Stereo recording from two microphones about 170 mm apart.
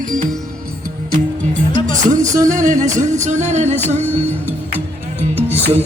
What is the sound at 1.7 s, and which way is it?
Music, 45° right (ahead or behind).